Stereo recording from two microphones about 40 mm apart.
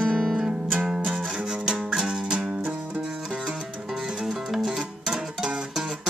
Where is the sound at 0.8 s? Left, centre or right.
Centre.